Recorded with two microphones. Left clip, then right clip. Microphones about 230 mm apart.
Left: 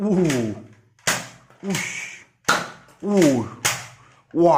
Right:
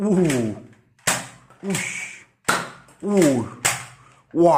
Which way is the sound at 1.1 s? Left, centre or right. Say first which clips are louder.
Even; centre.